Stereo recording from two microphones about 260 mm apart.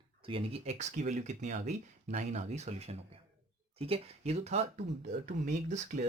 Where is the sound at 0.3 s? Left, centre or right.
Right.